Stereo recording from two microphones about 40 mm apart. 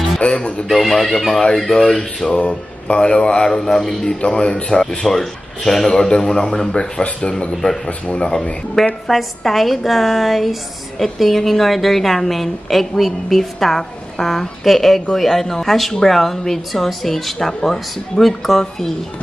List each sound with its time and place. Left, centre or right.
0.2 s a sound: left
0.7 s a woman's voice: centre
2.4 s speech: left
5.0 s a woman's voice: centre; by 8.4 s left
9.0 s a woman's voice: centre